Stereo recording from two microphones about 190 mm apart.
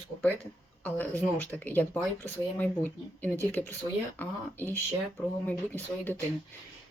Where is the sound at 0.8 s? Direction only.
10° left (ahead or behind).